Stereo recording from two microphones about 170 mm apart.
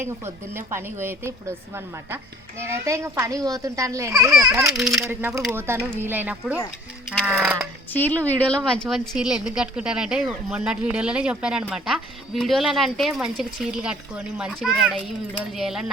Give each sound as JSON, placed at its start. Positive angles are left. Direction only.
{"t": 0.5, "sound": "a woman's voice", "side_deg": -15}
{"t": 4.7, "sound": "speech", "side_deg": 0}
{"t": 5.0, "sound": "a woman's voice", "side_deg": -15}
{"t": 7.9, "sound": "speech", "side_deg": 10}